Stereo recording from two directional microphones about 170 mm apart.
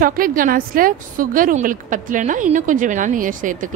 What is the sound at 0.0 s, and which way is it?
A woman's voice, 55° right (ahead or behind).